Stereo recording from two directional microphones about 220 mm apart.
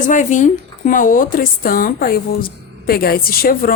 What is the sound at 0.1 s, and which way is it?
Speech, 35° left (ahead or behind).